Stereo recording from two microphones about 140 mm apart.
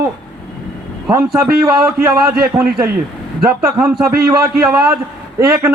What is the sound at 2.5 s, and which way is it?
Speech, 20° right (ahead or behind).